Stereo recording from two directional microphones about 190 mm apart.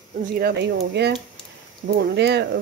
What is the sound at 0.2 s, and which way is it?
Speech, 60° right (ahead or behind).